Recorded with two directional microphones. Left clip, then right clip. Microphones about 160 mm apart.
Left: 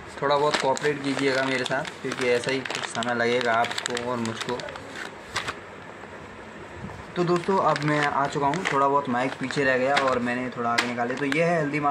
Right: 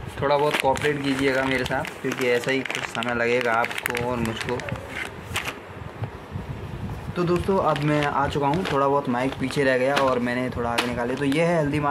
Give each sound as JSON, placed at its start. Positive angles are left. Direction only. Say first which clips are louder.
{"t": 0.2, "sound": "speech", "louder": "right 1 dB", "side_deg": -10}
{"t": 7.2, "sound": "speech", "louder": "even", "side_deg": -10}
{"t": 8.0, "sound": "speech", "louder": "right 1 dB", "side_deg": -25}